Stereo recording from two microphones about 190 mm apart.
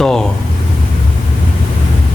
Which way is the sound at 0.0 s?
5° left (ahead or behind).